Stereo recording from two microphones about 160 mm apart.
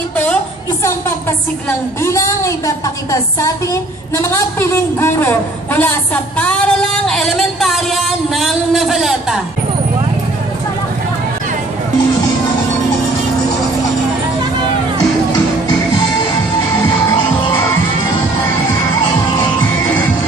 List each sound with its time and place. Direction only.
2.0 s a woman's voice: 20° left (ahead or behind)
4.2 s a sound: 15° left (ahead or behind); by 9.4 s centre (ahead or behind)
17.0 s music: 15° left (ahead or behind)